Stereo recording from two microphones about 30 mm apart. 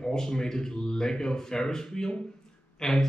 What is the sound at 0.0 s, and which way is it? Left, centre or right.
Speech, left.